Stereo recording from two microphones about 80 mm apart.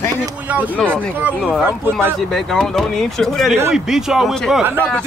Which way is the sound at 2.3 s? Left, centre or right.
Centre.